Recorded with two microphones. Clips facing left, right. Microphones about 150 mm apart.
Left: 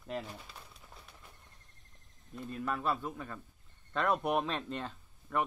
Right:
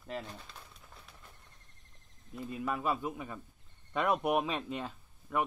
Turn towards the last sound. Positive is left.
turn(degrees=-5)  # may be behind; listen again after turning